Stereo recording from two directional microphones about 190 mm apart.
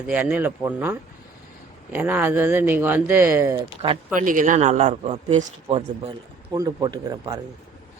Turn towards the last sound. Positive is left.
turn(degrees=-20)  # may be behind; listen again after turning